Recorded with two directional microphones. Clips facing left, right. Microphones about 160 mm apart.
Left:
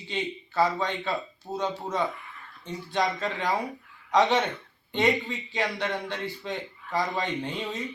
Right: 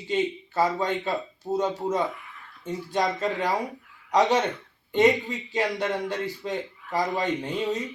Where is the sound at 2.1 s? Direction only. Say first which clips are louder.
Even; 5° right (ahead or behind).